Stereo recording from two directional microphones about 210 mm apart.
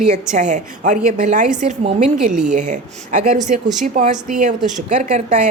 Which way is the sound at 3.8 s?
40° right (ahead or behind).